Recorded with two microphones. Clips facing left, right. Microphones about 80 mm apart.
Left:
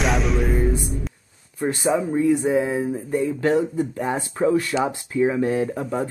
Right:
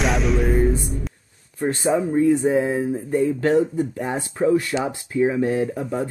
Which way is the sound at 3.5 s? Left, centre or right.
Left.